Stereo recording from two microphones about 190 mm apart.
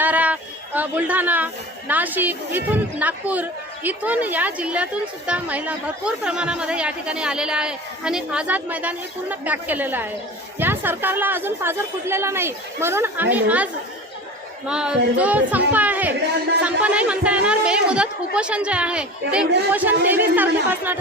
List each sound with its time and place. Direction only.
0.0 s a sound: 10° right (ahead or behind)
1.9 s speech: 10° right (ahead or behind)
14.7 s a woman's voice: 5° right (ahead or behind)